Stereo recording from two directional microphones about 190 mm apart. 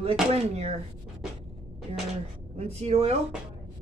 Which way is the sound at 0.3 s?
30° right (ahead or behind).